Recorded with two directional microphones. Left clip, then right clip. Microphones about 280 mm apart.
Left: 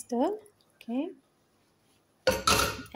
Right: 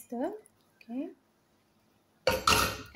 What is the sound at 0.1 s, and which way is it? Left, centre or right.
Speech, left.